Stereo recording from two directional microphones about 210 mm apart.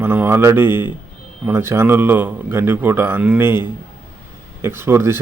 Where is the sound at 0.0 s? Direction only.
10° right (ahead or behind).